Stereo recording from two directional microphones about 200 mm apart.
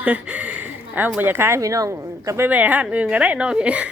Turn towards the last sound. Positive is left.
turn(degrees=-5)  # may be behind; listen again after turning